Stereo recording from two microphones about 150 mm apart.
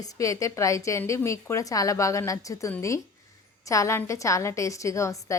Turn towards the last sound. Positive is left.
turn(degrees=20)  # may be behind; listen again after turning